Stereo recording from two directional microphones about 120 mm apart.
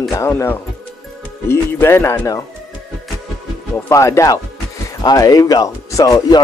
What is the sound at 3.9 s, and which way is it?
Speech, 25° left (ahead or behind).